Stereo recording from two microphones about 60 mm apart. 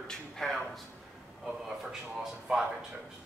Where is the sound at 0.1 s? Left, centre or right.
Centre.